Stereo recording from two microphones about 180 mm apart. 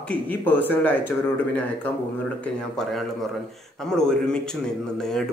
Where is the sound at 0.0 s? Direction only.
10° left (ahead or behind).